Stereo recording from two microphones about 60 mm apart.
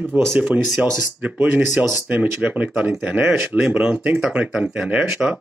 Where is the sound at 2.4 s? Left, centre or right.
Right.